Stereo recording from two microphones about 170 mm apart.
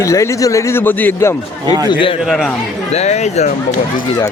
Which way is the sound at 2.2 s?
Centre (ahead or behind).